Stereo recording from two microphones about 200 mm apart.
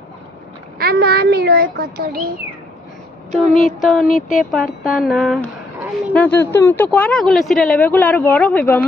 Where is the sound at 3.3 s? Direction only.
Centre (ahead or behind).